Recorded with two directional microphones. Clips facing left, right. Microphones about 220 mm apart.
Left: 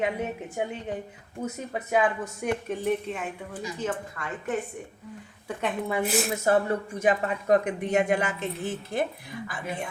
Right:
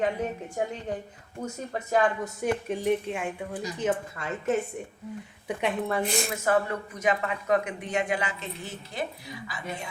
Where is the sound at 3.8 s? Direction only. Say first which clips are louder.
Right 4 dB; 25° right (ahead or behind).